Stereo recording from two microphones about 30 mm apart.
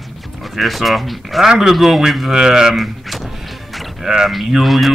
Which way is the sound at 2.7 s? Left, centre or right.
Centre.